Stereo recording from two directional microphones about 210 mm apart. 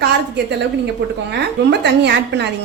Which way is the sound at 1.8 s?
55° right (ahead or behind).